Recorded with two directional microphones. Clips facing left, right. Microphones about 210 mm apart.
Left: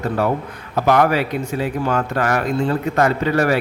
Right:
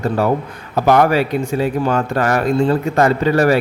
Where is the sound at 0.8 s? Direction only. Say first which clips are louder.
Right 3 dB; 35° right (ahead or behind).